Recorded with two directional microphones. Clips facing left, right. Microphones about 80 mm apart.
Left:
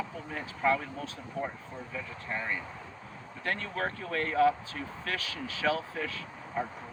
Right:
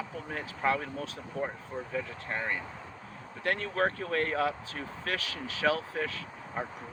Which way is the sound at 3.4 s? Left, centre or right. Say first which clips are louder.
Right 4 dB; right.